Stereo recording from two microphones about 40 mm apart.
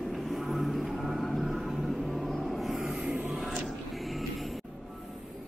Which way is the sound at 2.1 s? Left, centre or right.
Centre.